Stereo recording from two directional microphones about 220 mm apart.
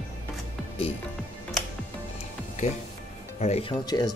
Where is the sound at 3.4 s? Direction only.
25° left (ahead or behind).